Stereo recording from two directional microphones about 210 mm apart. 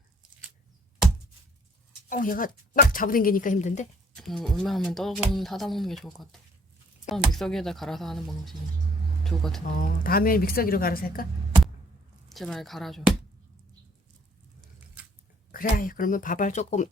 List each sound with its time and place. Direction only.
2.0 s speech: 40° left (ahead or behind)
4.1 s speech: centre (ahead or behind)
9.6 s a woman's voice: 40° left (ahead or behind)
12.3 s speech: centre (ahead or behind)
15.5 s speech: 40° left (ahead or behind)